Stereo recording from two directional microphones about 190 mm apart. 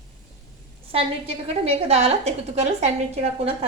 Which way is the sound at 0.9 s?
30° right (ahead or behind).